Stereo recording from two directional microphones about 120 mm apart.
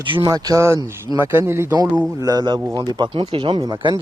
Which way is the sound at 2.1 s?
30° right (ahead or behind).